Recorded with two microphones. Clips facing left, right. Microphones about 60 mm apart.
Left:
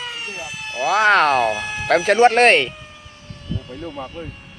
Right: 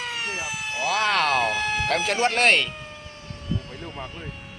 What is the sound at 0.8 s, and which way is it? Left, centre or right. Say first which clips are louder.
Speech: left 8 dB; left.